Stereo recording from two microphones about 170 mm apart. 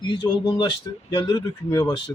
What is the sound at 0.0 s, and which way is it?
A man's voice, 30° left (ahead or behind).